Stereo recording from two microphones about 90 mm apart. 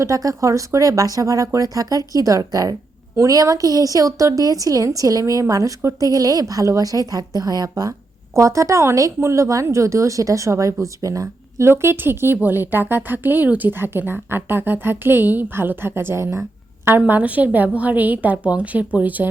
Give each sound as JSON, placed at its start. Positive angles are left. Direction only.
{"t": 0.0, "sound": "a woman's voice", "side_deg": -40}
{"t": 8.4, "sound": "a woman's voice", "side_deg": -35}